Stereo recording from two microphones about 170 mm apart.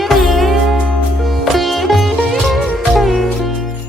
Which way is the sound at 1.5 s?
Centre (ahead or behind).